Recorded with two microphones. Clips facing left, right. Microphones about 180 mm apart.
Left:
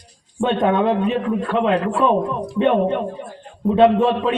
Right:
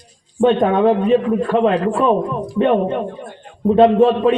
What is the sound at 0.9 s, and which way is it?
A man's voice, 50° right (ahead or behind).